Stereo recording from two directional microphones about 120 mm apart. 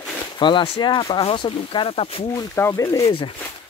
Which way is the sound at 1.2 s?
50° left (ahead or behind).